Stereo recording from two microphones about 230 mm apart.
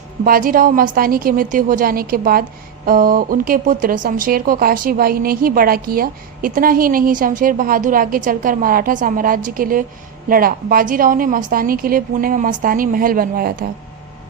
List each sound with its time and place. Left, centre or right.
0.3 s speech: right